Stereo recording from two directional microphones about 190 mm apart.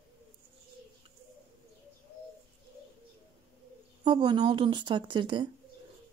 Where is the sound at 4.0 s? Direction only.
20° right (ahead or behind).